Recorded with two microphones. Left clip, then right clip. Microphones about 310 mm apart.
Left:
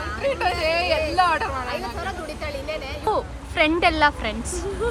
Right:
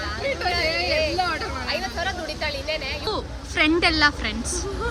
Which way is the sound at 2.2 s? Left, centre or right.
Centre.